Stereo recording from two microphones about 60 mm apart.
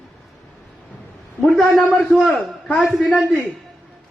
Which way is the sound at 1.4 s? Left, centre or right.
Centre.